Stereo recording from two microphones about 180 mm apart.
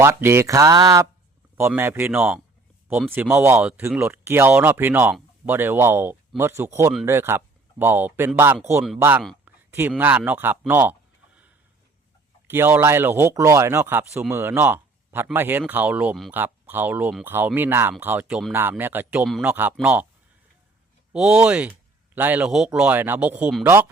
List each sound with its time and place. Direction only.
0.0 s speech: 15° right (ahead or behind)
9.4 s a sound: 10° right (ahead or behind)
10.0 s speech: 10° right (ahead or behind)
12.5 s speech: 10° right (ahead or behind)
21.1 s speech: 5° right (ahead or behind)